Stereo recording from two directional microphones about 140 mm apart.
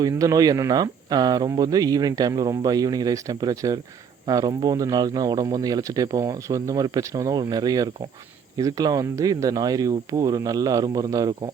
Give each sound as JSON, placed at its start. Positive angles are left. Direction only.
{"t": 0.0, "sound": "speech", "side_deg": -25}